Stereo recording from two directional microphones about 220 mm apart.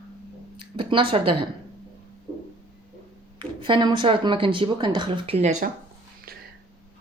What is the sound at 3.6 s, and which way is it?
Speech, 20° right (ahead or behind).